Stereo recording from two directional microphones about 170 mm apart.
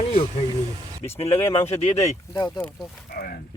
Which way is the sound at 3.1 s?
60° left (ahead or behind).